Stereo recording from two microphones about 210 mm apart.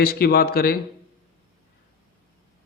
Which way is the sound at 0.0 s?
45° left (ahead or behind).